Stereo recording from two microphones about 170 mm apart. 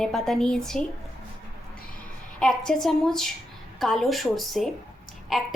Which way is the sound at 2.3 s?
5° left (ahead or behind).